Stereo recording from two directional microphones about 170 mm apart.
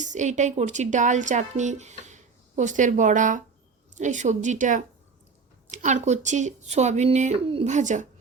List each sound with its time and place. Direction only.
0.0 s a woman's voice: 45° right (ahead or behind)